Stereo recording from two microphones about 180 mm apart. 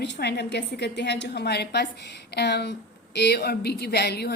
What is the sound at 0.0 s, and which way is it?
A woman's voice, 70° left (ahead or behind).